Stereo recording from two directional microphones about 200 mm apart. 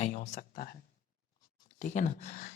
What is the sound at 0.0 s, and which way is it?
Speech, 35° left (ahead or behind).